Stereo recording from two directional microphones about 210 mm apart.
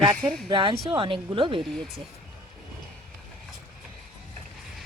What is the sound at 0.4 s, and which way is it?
Speech, 25° right (ahead or behind).